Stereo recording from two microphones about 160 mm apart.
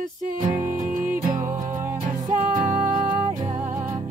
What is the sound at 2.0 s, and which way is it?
Music, 50° right (ahead or behind).